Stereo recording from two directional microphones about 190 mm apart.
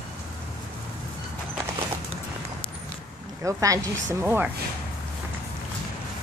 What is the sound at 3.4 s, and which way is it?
Speech, 15° right (ahead or behind).